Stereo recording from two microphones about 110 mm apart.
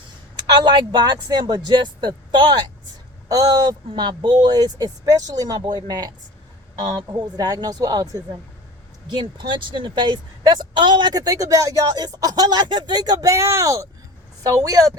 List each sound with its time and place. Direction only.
0.5 s speech: 45° right (ahead or behind)
7.1 s speech: 40° right (ahead or behind)
9.0 s speech: 45° right (ahead or behind)